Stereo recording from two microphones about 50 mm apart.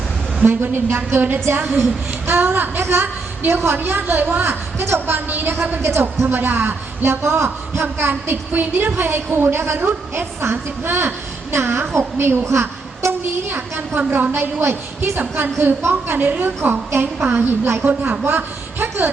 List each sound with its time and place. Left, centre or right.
0.4 s speech: right
2.8 s a woman's voice: right
3.8 s a woman's voice: right
4.4 s a woman's voice: right
4.9 s speech: right
5.8 s a woman's voice: right
6.2 s speech: right
12.5 s a sound: right
13.5 s a woman's voice: right
14.6 s a woman's voice: right
15.1 s a woman's voice: right